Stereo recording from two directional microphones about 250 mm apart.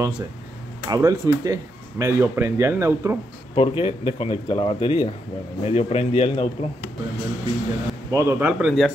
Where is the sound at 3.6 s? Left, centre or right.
Left.